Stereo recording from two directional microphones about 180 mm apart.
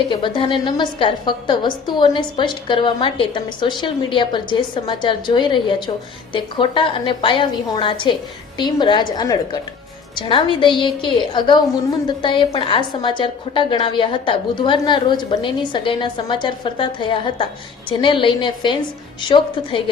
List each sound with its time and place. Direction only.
0.1 s a woman's voice: 25° left (ahead or behind)